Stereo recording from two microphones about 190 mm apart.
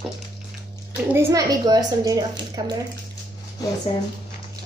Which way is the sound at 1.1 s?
15° right (ahead or behind).